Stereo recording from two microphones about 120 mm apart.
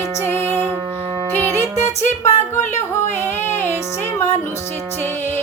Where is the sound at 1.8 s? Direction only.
70° left (ahead or behind).